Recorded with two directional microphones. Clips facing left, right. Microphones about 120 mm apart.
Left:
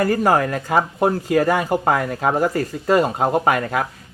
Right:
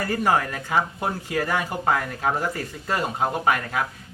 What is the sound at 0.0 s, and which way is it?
Speech, 45° left (ahead or behind).